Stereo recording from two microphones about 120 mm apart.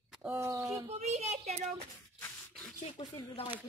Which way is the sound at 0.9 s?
65° right (ahead or behind).